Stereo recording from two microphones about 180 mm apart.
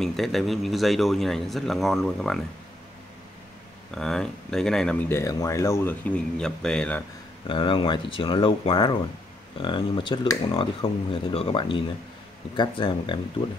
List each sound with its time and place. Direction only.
0.0 s speech: centre (ahead or behind)
3.9 s speech: 5° left (ahead or behind)
7.4 s speech: 30° left (ahead or behind)